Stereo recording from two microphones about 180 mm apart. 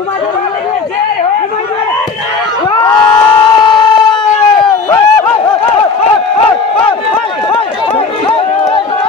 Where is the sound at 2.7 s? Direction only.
20° left (ahead or behind).